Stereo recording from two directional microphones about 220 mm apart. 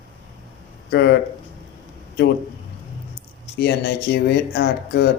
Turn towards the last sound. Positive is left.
turn(degrees=45)  # may be behind; listen again after turning